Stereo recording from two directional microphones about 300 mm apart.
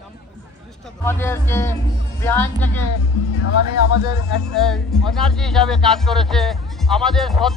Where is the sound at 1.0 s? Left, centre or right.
Centre.